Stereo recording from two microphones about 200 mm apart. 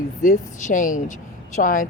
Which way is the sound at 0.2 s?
40° left (ahead or behind).